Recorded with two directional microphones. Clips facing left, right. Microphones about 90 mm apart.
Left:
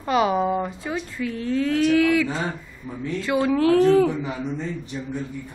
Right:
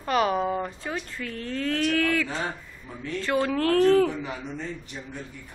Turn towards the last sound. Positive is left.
turn(degrees=25)  # may be behind; listen again after turning